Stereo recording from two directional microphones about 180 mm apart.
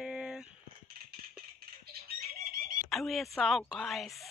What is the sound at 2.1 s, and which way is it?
Squawk, 60° right (ahead or behind).